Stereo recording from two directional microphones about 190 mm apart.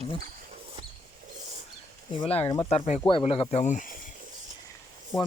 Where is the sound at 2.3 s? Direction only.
30° left (ahead or behind).